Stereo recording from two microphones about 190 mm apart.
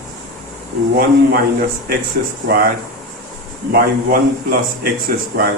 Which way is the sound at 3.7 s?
50° right (ahead or behind).